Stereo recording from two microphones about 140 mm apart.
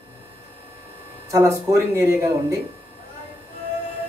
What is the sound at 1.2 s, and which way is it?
Speech, 20° right (ahead or behind).